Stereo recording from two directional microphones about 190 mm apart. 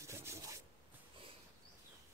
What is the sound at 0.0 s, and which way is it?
Rub, 15° right (ahead or behind).